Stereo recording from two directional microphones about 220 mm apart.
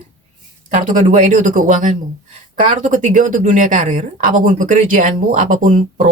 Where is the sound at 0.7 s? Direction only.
35° right (ahead or behind).